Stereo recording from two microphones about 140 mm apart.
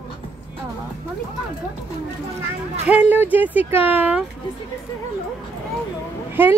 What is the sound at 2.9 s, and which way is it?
Speech, 10° right (ahead or behind).